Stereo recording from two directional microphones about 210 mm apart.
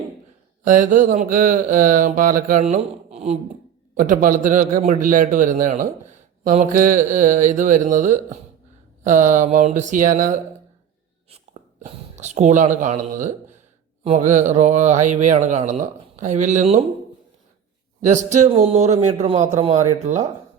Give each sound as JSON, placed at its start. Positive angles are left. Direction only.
{"t": 0.6, "sound": "a man's voice", "side_deg": -40}
{"t": 11.8, "sound": "a man's voice", "side_deg": -30}
{"t": 18.0, "sound": "a man's voice", "side_deg": -35}